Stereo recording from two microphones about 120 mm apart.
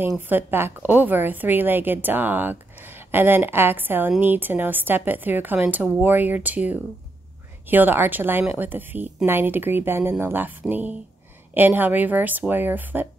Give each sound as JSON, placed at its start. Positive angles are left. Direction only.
{"t": 0.2, "sound": "a woman's voice", "side_deg": -15}